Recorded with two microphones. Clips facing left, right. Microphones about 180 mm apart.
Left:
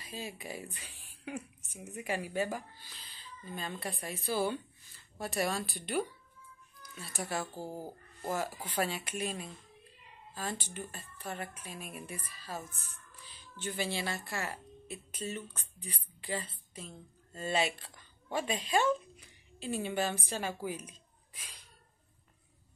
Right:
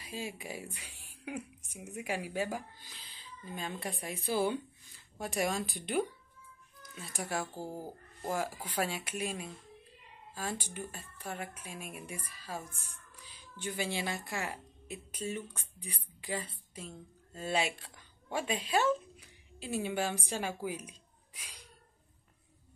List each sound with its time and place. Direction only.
0.1 s a woman's voice: 10° right (ahead or behind)
6.8 s music: 15° right (ahead or behind)
7.2 s a woman's voice: 10° right (ahead or behind)